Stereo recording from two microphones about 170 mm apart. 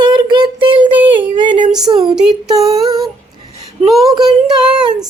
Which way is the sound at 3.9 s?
Centre (ahead or behind).